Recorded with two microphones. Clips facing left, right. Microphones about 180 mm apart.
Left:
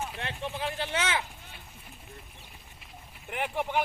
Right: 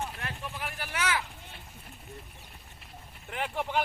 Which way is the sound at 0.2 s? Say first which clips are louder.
Left 4 dB; 25° left (ahead or behind).